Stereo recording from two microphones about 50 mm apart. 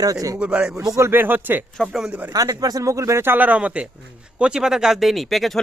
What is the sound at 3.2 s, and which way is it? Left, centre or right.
Speech, right.